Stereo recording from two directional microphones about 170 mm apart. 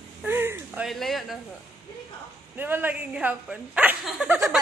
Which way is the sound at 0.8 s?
Centre (ahead or behind).